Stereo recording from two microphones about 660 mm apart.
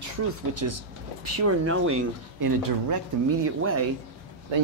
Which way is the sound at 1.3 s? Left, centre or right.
Right.